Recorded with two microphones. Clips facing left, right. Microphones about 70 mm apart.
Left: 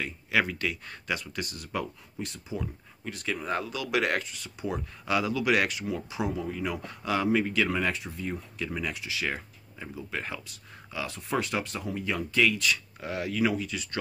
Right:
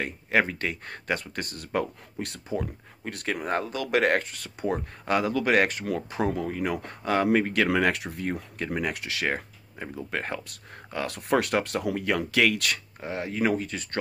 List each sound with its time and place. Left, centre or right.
0.0 s speech: right
7.7 s speech: right
13.0 s speech: right